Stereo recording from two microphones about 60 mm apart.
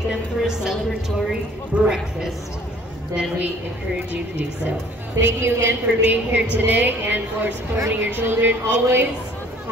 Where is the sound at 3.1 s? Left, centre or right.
Right.